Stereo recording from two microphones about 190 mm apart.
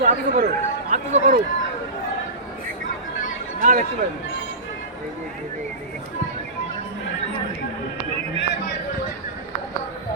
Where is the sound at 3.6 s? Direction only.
40° right (ahead or behind).